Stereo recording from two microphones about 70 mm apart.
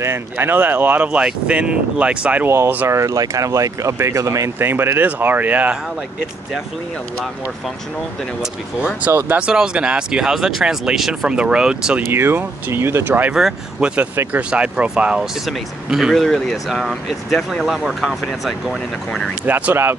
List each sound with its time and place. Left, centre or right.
0.0 s speech: right; by 2.4 s centre
2.4 s speech: right
2.9 s speech: right
4.6 s speech: right
9.0 s speech: right
9.5 s speech: centre
12.1 s speech: right
13.3 s speech: centre
13.7 s speech: centre
15.4 s speech: centre
19.4 s speech: right